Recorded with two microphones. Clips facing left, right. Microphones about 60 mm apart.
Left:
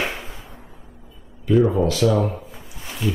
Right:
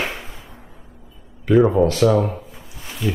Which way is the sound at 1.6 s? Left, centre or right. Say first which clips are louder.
Right 4 dB; right.